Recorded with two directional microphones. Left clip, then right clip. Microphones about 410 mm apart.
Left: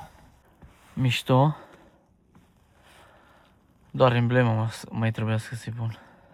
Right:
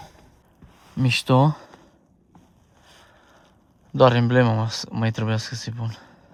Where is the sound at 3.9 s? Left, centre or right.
Centre.